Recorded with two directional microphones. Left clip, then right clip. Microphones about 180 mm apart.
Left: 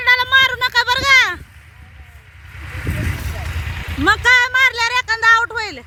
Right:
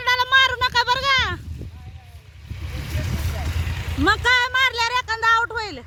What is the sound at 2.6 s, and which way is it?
Vehicle, 25° left (ahead or behind).